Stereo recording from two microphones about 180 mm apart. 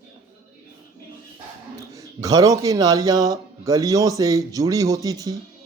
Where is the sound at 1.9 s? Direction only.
20° right (ahead or behind).